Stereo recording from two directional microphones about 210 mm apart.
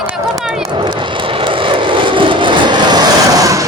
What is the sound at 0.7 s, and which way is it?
Vehicle, 20° right (ahead or behind).